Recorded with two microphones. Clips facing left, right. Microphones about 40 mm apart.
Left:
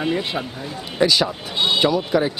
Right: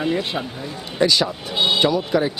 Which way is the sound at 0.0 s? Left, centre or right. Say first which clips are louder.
Even; centre.